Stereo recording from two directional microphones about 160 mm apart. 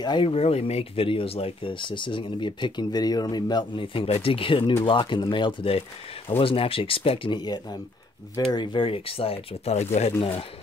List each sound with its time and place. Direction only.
0.0 s speech: 30° left (ahead or behind)